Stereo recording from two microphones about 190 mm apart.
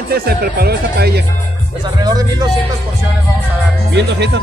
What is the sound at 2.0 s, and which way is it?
Speech, 20° right (ahead or behind).